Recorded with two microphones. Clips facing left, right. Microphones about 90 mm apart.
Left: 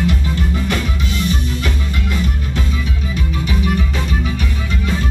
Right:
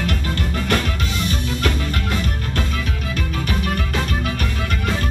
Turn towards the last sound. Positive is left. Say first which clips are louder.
# left 3 dB
turn(degrees=-55)  # may be behind; listen again after turning